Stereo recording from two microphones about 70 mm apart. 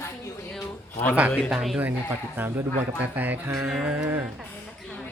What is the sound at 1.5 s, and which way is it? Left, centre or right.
Speech, centre.